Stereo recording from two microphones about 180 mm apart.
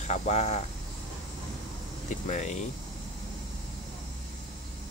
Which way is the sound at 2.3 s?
40° left (ahead or behind).